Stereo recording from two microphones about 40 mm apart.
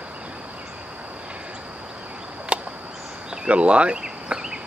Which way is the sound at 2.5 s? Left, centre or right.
Right.